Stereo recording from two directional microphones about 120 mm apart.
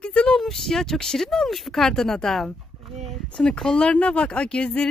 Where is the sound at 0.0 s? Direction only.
10° left (ahead or behind).